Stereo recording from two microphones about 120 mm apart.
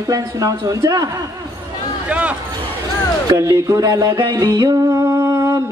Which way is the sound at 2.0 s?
10° right (ahead or behind).